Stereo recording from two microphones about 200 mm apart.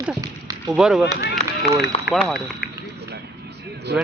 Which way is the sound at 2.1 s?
50° left (ahead or behind).